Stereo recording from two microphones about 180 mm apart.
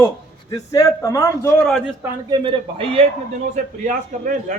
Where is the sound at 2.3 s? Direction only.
30° right (ahead or behind).